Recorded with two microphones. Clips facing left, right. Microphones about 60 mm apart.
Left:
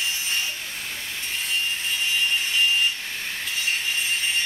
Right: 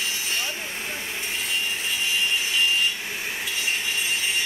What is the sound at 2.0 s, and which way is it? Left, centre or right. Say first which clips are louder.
Wood: left 1 dB; centre.